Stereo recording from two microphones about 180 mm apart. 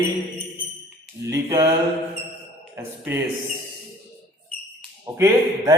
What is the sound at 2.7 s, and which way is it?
Speech, 10° right (ahead or behind).